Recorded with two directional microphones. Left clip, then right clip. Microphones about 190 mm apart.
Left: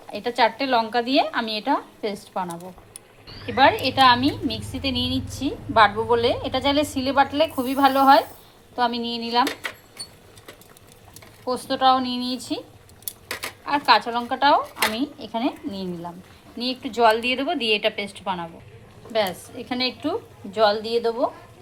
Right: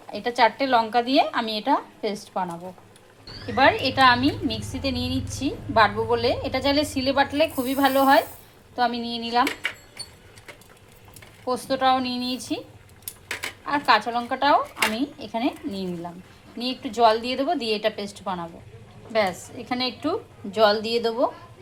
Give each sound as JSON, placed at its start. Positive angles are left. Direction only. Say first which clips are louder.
{"t": 0.1, "sound": "a woman's voice", "louder": "even", "side_deg": 0}
{"t": 11.7, "sound": "a woman's voice", "louder": "left 3 dB", "side_deg": 0}
{"t": 13.7, "sound": "a woman's voice", "louder": "left 2 dB", "side_deg": 5}
{"t": 20.6, "sound": "speech", "louder": "even", "side_deg": -15}